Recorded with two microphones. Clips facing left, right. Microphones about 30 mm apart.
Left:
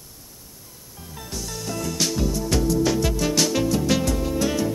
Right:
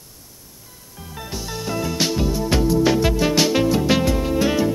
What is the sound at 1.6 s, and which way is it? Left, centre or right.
Music, right.